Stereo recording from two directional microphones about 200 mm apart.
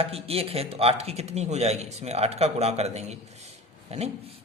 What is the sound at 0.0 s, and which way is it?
A man's voice, 30° right (ahead or behind).